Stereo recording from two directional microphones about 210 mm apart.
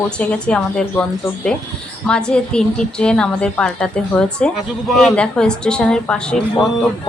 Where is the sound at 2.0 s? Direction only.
5° left (ahead or behind).